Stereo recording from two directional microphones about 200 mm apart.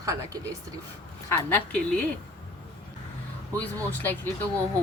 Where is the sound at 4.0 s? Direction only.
10° left (ahead or behind).